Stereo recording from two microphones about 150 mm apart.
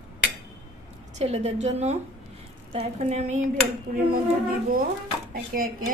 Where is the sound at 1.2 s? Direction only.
45° right (ahead or behind).